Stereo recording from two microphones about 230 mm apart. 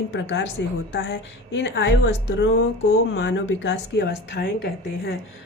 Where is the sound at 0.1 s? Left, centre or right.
Left.